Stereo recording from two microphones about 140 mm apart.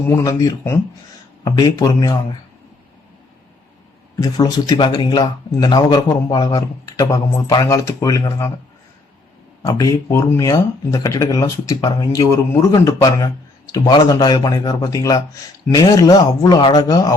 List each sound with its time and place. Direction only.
0.3 s speech: 25° left (ahead or behind)
4.2 s speech: 30° left (ahead or behind)
9.6 s speech: 25° left (ahead or behind)